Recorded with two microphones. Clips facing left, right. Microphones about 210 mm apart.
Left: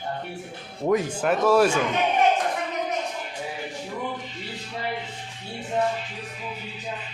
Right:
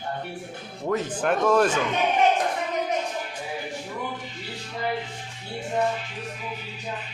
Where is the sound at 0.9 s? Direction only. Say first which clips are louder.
Left 2 dB; 10° left (ahead or behind).